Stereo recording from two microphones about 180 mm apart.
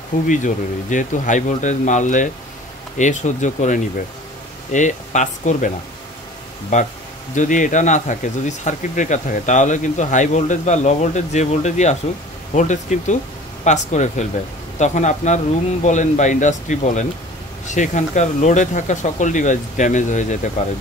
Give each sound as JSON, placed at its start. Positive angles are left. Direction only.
{"t": 0.3, "sound": "speech", "side_deg": 45}
{"t": 6.7, "sound": "speech", "side_deg": 45}